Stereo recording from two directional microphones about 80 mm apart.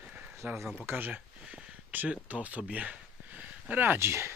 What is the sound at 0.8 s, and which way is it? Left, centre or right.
Speech, right.